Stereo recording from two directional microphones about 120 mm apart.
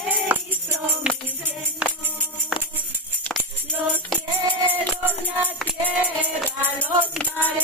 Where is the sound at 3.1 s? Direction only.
10° left (ahead or behind).